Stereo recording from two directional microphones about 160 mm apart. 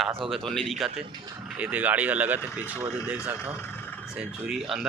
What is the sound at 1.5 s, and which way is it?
Speech, 10° right (ahead or behind).